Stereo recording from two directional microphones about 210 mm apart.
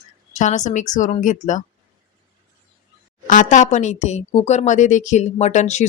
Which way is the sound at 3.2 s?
35° left (ahead or behind).